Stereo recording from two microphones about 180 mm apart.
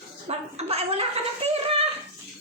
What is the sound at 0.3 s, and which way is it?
Speech, 35° right (ahead or behind).